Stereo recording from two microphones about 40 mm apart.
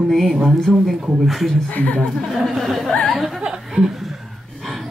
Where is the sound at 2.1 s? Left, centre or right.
Centre.